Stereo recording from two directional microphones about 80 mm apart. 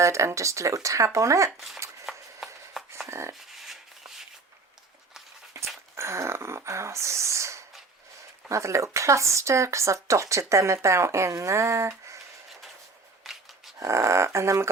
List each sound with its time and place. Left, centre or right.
0.0 s speech: right
2.0 s a sound: centre
3.1 s speech: right
3.5 s a sound: centre
5.5 s dog: right
6.0 s a sound: right
8.4 s speech: right
13.2 s dog: centre
13.7 s speech: right